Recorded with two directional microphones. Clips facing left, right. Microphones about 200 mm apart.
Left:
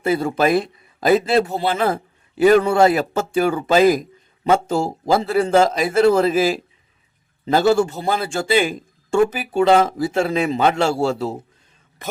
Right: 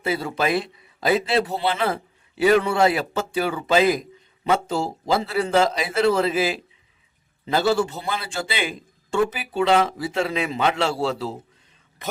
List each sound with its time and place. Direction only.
0.0 s a man's voice: 50° left (ahead or behind)